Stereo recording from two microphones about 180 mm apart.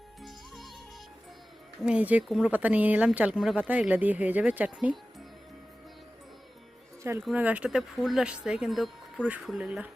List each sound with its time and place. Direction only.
0.2 s music: centre (ahead or behind)
1.8 s speech: 5° right (ahead or behind)
7.0 s speech: 15° right (ahead or behind)